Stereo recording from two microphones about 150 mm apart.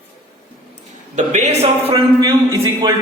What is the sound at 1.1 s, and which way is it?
A man's voice, 50° right (ahead or behind).